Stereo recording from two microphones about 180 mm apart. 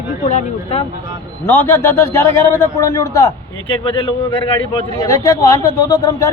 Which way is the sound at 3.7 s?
30° left (ahead or behind).